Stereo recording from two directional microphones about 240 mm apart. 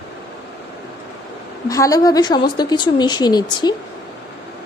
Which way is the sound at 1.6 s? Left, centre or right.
Centre.